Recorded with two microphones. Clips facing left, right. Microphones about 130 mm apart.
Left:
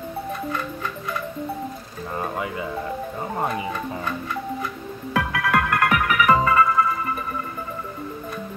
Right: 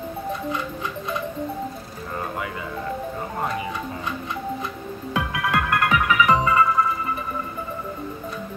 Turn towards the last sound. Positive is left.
turn(degrees=-20)  # may be behind; listen again after turning